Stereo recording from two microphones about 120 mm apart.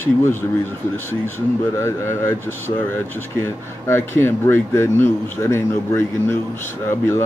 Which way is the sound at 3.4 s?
20° left (ahead or behind).